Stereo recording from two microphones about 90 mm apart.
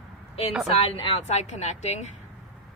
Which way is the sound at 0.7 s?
90° left.